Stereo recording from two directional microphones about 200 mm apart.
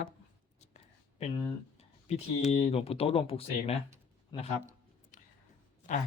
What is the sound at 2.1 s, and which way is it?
Speech, 30° left (ahead or behind).